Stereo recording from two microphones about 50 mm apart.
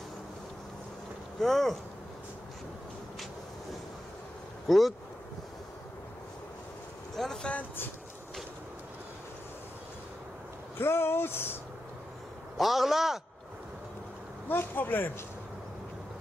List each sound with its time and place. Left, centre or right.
1.4 s a man's voice: centre
4.6 s a man's voice: centre
7.2 s speech: centre
10.8 s speech: left
12.5 s a man's voice: centre
14.5 s speech: left